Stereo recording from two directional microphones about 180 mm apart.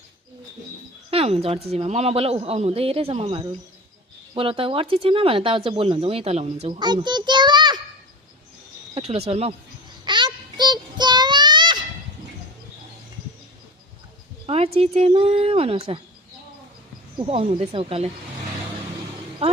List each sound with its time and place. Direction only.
1.1 s speech: 35° right (ahead or behind)
9.0 s speech: 35° right (ahead or behind)
10.0 s child singing: 25° right (ahead or behind)
14.4 s speech: 35° right (ahead or behind)
17.2 s speech: 30° right (ahead or behind)